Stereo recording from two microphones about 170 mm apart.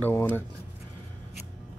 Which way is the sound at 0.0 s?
10° left (ahead or behind).